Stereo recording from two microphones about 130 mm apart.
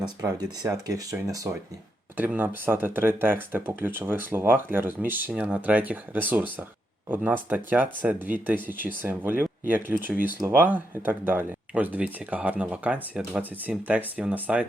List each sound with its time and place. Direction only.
0.0 s speech: 30° right (ahead or behind)
2.1 s speech: 15° right (ahead or behind)